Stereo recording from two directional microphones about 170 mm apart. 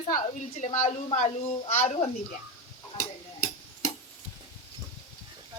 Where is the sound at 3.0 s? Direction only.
55° left (ahead or behind).